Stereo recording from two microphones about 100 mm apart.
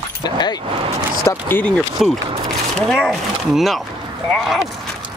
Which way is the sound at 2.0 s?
Centre (ahead or behind).